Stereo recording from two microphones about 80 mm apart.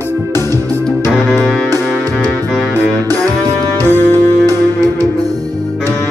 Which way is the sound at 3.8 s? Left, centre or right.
Left.